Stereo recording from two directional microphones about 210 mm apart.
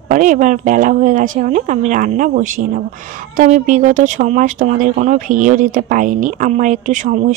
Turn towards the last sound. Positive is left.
turn(degrees=-35)  # may be behind; listen again after turning